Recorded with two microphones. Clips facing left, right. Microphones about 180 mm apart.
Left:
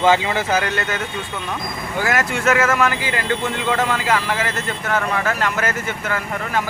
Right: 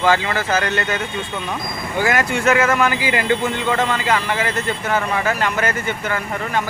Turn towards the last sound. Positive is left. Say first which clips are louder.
# right 1 dB
turn(degrees=0)  # may be behind; listen again after turning